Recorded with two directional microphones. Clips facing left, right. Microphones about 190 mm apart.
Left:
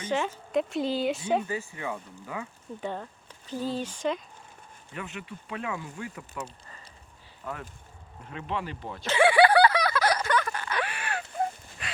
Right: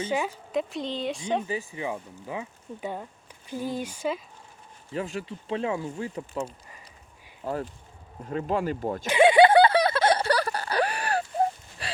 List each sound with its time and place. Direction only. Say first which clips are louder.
0.1 s speech: left 2 dB; 10° right (ahead or behind)
0.5 s speech: left 3 dB; centre (ahead or behind)
1.5 s speech: right 2 dB; 15° right (ahead or behind)
2.8 s speech: even; 10° right (ahead or behind)
4.9 s speech: right 7 dB; 30° right (ahead or behind)
9.0 s a sound: right 3 dB; 20° right (ahead or behind); by 11.9 s 35° right (ahead or behind)